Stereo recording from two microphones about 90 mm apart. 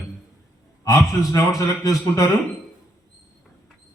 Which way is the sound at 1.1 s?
35° left (ahead or behind).